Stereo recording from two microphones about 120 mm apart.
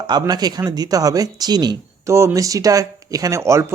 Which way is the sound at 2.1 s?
25° right (ahead or behind).